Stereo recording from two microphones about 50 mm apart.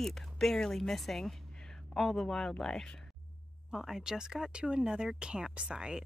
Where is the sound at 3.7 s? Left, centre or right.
Centre.